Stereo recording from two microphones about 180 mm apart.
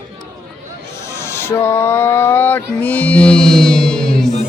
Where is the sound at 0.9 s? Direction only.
15° left (ahead or behind).